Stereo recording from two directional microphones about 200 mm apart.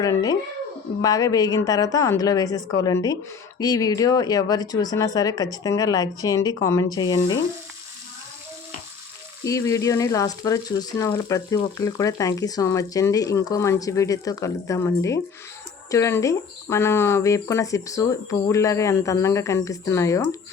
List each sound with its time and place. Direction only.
1.0 s speech: 20° left (ahead or behind)
9.4 s speech: 15° left (ahead or behind)